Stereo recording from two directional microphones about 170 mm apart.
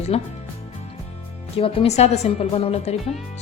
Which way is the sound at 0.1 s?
40° left (ahead or behind).